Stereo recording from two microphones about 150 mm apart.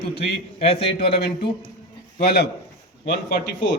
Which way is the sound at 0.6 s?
40° left (ahead or behind).